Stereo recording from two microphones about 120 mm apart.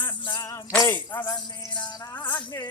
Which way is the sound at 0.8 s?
15° left (ahead or behind).